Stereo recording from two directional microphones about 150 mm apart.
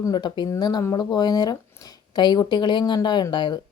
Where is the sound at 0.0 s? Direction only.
30° left (ahead or behind).